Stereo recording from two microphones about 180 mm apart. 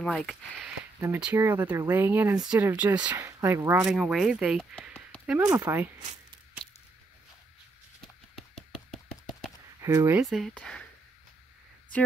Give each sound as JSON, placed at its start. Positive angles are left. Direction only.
{"t": 0.0, "sound": "speech", "side_deg": 0}
{"t": 1.0, "sound": "speech", "side_deg": -10}
{"t": 3.7, "sound": "speech", "side_deg": -5}
{"t": 5.4, "sound": "speech", "side_deg": -20}
{"t": 8.4, "sound": "a sound", "side_deg": 0}
{"t": 9.8, "sound": "speech", "side_deg": -20}
{"t": 10.2, "sound": "speech", "side_deg": 0}